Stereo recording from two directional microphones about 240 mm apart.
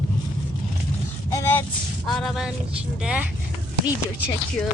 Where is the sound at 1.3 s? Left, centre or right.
Centre.